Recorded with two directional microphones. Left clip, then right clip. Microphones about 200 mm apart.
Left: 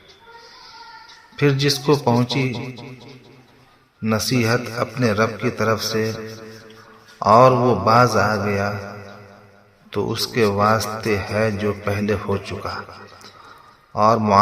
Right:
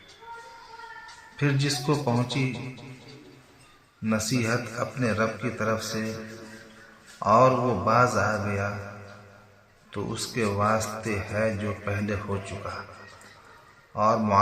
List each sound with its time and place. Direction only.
1.4 s a man's voice: 40° left (ahead or behind)
4.0 s a man's voice: 40° left (ahead or behind)
13.9 s a man's voice: 40° left (ahead or behind)